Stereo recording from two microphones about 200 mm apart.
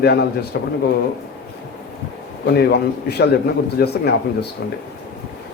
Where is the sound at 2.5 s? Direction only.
55° left (ahead or behind).